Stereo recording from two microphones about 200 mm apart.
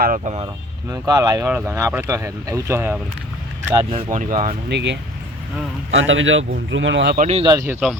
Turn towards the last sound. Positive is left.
turn(degrees=-15)  # may be behind; listen again after turning